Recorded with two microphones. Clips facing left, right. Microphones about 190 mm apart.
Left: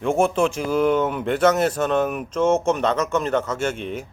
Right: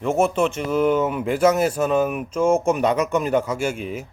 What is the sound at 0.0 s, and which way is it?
A man's voice, 5° right (ahead or behind).